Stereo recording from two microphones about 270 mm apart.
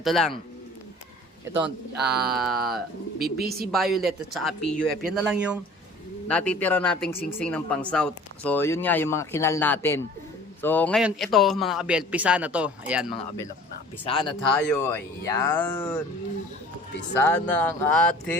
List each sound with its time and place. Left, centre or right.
0.0 s a man's voice: centre
2.1 s a man's voice: centre
3.2 s speech: right
3.7 s a man's voice: centre
14.0 s speech: centre
14.5 s speech: centre
17.2 s a man's voice: centre